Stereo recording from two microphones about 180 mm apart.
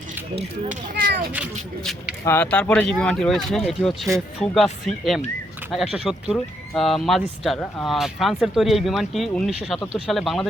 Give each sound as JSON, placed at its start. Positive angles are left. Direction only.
{"t": 0.9, "sound": "a child's voice", "side_deg": -60}
{"t": 1.8, "sound": "speech", "side_deg": 0}
{"t": 2.2, "sound": "speech", "side_deg": 10}